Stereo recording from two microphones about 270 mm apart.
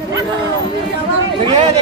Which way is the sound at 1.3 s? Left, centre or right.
Centre.